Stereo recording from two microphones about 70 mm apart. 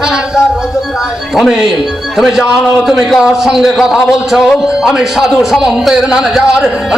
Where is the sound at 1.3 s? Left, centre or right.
Centre.